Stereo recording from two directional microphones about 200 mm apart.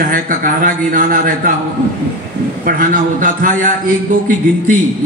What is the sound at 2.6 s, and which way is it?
A man's voice, 45° right (ahead or behind).